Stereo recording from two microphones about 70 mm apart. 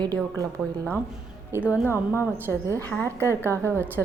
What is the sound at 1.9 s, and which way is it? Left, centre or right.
Speech, left.